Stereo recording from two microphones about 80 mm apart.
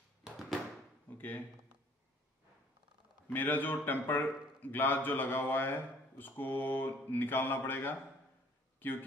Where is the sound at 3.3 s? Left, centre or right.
Left.